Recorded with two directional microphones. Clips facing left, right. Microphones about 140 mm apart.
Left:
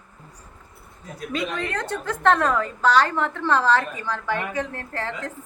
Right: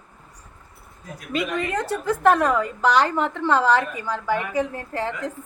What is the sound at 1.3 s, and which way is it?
A woman's voice, 5° right (ahead or behind).